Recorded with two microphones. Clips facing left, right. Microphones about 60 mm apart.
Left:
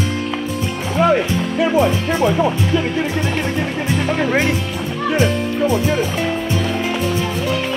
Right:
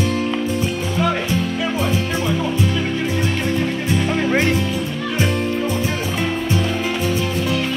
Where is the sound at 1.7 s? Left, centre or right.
Left.